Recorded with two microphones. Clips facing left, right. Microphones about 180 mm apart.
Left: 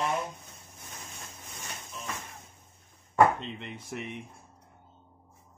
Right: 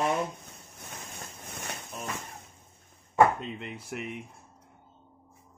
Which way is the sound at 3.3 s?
5° right (ahead or behind).